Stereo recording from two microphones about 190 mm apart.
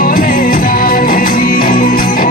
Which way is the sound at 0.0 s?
45° left (ahead or behind).